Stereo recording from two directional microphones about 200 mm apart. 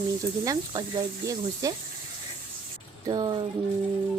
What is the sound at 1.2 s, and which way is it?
Speech, 15° right (ahead or behind).